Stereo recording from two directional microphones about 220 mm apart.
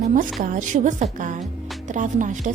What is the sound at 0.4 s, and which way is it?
Speech, 35° right (ahead or behind).